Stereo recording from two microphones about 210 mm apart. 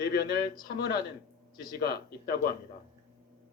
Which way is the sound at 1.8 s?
50° left (ahead or behind).